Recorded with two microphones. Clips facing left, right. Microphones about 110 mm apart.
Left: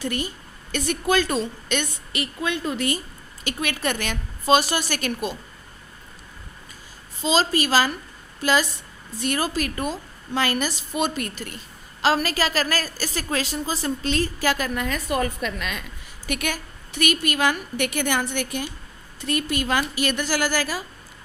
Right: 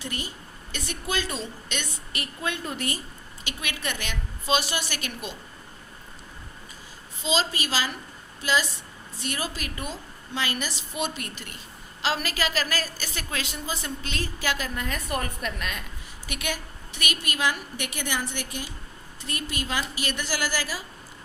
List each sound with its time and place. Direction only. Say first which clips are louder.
0.0 s a woman's voice: left 7 dB; 50° left (ahead or behind)
2.1 s a woman's voice: left 5 dB; 90° left
3.4 s a woman's voice: left 7 dB; 45° left (ahead or behind)
7.2 s a woman's voice: left 6 dB; 45° left (ahead or behind)
14.8 s a woman's voice: left 6 dB; 90° left
16.2 s a woman's voice: left 5 dB; 50° left (ahead or behind)